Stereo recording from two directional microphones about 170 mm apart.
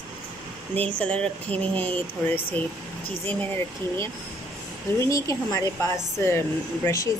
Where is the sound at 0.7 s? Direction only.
10° left (ahead or behind).